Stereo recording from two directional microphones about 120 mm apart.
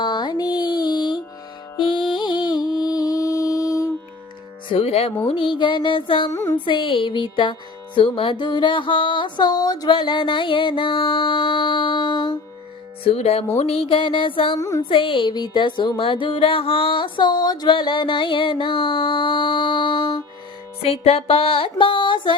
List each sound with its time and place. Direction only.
0.0 s music: 40° left (ahead or behind)
4.7 s speech: 55° left (ahead or behind)
5.3 s music: 45° left (ahead or behind)
13.1 s speech: 60° left (ahead or behind)
13.6 s music: 55° left (ahead or behind)
14.6 s a sound: 25° left (ahead or behind)
14.8 s music: 45° left (ahead or behind)
20.8 s music: 55° left (ahead or behind)